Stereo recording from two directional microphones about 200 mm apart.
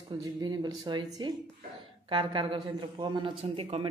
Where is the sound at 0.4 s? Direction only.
20° right (ahead or behind).